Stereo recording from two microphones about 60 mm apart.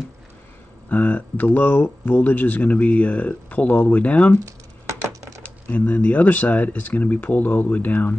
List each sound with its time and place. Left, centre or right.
0.8 s speech: left
4.5 s a sound: right
5.4 s speech: left